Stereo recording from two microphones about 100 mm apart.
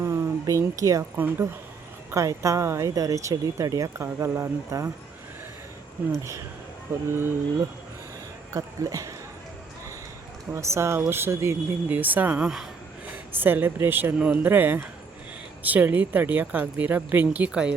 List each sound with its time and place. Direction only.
0.0 s a sound: 30° right (ahead or behind)
1.1 s speech: 20° right (ahead or behind)
2.1 s speech: 30° right (ahead or behind)
6.1 s speech: 30° right (ahead or behind)
8.5 s speech: 35° right (ahead or behind)
10.5 s speech: 30° right (ahead or behind)
12.4 s speech: 5° right (ahead or behind)
13.3 s speech: 20° right (ahead or behind)